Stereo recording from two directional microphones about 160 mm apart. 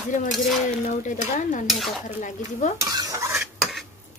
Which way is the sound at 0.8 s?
50° left (ahead or behind).